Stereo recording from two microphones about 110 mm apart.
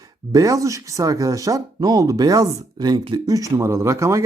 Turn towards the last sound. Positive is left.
turn(degrees=-30)  # may be behind; listen again after turning